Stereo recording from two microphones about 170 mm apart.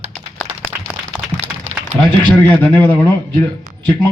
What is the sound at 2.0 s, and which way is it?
Speech, 10° left (ahead or behind).